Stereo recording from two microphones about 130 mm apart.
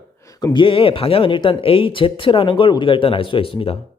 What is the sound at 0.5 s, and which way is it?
Speech, 40° left (ahead or behind).